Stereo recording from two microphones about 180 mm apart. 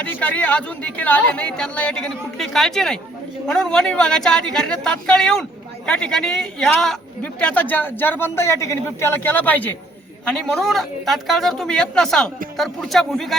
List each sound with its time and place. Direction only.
0.0 s speech: 10° left (ahead or behind)